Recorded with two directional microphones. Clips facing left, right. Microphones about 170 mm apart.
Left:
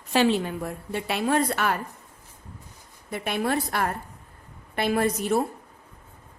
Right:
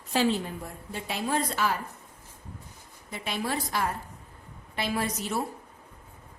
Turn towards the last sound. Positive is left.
turn(degrees=55)  # may be behind; listen again after turning